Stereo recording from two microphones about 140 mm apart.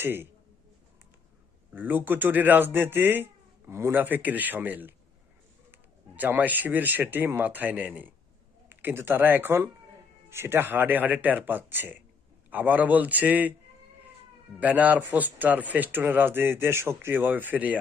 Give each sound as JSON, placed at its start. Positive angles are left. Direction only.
{"t": 0.0, "sound": "speech", "side_deg": -15}
{"t": 1.7, "sound": "speech", "side_deg": -15}
{"t": 14.6, "sound": "speech", "side_deg": -10}